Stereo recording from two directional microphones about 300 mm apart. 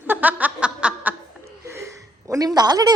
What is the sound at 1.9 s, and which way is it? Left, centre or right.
Speech, centre.